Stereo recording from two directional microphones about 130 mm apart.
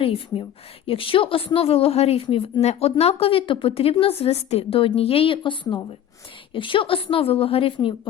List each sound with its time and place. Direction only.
0.0 s a woman's voice: 45° left (ahead or behind)